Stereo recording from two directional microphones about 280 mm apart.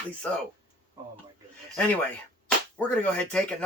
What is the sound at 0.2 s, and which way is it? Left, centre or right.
Speech, centre.